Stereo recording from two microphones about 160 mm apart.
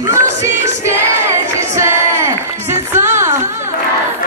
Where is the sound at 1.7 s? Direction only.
15° right (ahead or behind).